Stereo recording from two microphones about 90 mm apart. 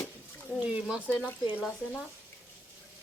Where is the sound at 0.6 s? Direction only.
10° right (ahead or behind).